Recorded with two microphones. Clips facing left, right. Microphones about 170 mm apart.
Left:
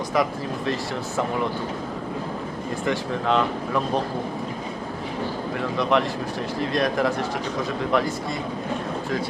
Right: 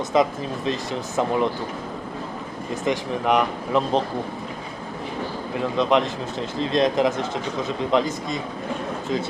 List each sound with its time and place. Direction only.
0.1 s speech: 20° right (ahead or behind)
2.8 s speech: 15° right (ahead or behind)
5.5 s speech: 20° right (ahead or behind)